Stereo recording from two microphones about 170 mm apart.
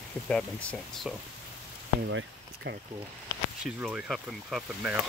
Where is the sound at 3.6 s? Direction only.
5° right (ahead or behind).